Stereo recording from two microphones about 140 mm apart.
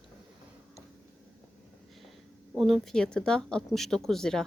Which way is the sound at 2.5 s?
Centre (ahead or behind).